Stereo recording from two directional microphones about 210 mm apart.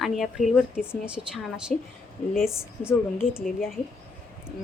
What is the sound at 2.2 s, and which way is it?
Speech, 35° left (ahead or behind).